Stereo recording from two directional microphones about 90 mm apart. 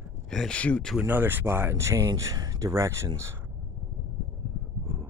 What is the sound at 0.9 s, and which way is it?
Speech, 20° right (ahead or behind).